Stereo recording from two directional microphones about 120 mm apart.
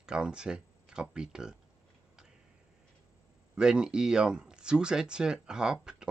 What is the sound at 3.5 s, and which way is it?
Speech, 5° right (ahead or behind).